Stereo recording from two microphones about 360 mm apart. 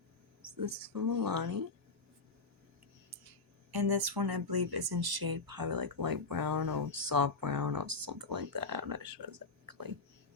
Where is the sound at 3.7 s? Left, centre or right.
Right.